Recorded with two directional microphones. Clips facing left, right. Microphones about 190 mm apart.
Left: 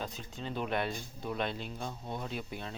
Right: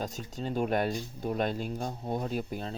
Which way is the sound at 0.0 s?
45° right (ahead or behind).